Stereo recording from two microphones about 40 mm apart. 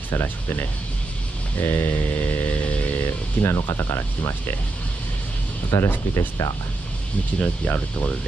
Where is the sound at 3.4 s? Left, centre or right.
Left.